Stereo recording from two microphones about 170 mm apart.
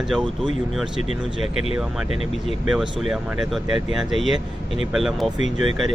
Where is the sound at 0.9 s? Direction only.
40° left (ahead or behind).